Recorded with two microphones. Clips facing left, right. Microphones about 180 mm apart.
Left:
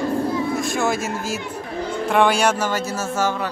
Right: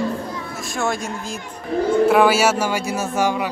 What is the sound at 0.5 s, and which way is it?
A man's voice, centre (ahead or behind).